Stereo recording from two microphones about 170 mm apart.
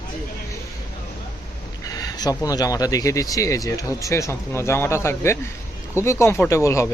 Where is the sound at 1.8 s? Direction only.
20° left (ahead or behind).